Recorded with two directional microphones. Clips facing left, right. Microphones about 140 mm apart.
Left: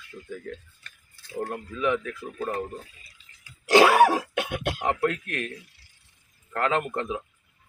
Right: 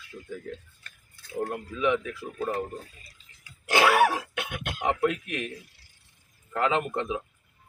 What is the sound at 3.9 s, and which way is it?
Speech, 35° left (ahead or behind).